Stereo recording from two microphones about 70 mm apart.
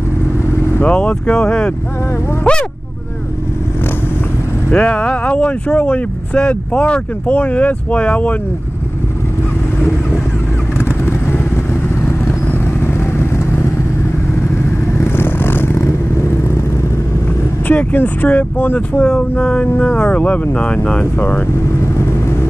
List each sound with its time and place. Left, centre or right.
0.8 s speech: centre
4.6 s speech: centre
11.1 s vehicle: left
15.0 s vehicle: left
17.6 s speech: left
18.9 s speech: centre
21.0 s speech: left